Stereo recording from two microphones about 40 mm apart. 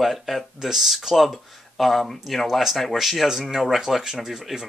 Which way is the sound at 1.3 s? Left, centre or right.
Centre.